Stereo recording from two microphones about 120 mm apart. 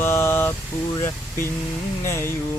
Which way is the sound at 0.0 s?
20° left (ahead or behind).